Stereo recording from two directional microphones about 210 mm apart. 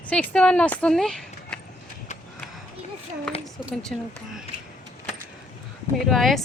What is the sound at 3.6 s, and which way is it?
Speech, centre (ahead or behind).